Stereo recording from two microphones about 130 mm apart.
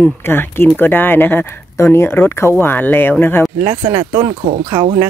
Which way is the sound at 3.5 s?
30° right (ahead or behind).